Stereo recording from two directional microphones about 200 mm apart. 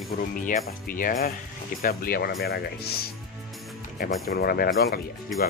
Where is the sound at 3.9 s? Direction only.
45° left (ahead or behind).